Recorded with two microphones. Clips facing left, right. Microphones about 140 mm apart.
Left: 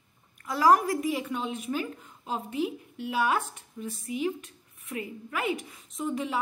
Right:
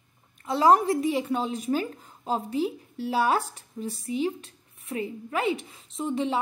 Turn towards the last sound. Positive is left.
turn(degrees=-30)  # may be behind; listen again after turning